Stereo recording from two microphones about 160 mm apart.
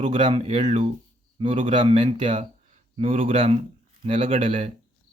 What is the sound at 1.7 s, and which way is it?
Speech, 30° right (ahead or behind).